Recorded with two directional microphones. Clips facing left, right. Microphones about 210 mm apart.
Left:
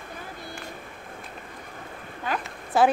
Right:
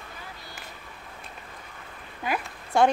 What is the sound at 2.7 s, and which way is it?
Speech, 5° left (ahead or behind).